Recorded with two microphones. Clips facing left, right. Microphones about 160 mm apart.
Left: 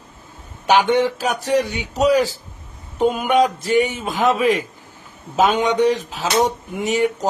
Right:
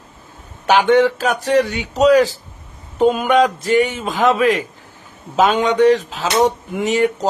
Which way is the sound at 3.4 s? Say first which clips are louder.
Right 2 dB; 10° left (ahead or behind).